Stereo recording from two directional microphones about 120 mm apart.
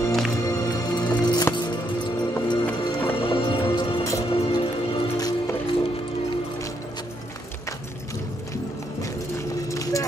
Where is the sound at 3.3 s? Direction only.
45° left (ahead or behind).